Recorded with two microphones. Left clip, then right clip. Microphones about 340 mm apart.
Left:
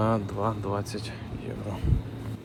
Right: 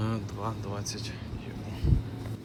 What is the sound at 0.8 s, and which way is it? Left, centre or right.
Speech, centre.